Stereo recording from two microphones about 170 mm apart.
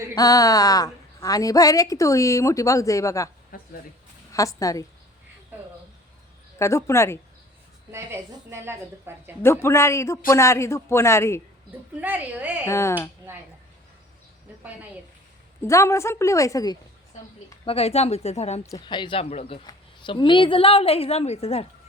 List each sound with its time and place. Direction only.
0.1 s a woman's voice: 20° left (ahead or behind)
3.5 s a sound: 60° left (ahead or behind)
4.3 s a woman's voice: 20° left (ahead or behind)
5.5 s a sound: 10° right (ahead or behind)
6.6 s a man's voice: 15° left (ahead or behind)
7.9 s a woman's voice: 15° right (ahead or behind)
9.4 s a man's voice: 15° left (ahead or behind)
11.9 s a woman's voice: 10° right (ahead or behind)
12.6 s a man's voice: 15° left (ahead or behind)
15.6 s a man's voice: 15° left (ahead or behind)
17.7 s a woman's voice: 35° left (ahead or behind)